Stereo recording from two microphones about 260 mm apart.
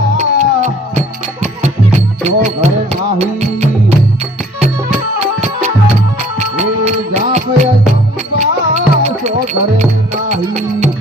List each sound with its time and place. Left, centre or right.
0.2 s music: right
6.6 s music: right